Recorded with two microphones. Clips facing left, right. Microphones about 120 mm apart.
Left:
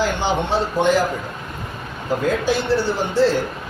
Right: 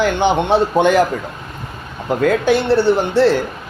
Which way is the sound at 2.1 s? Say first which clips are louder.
Right 5 dB; 65° right (ahead or behind).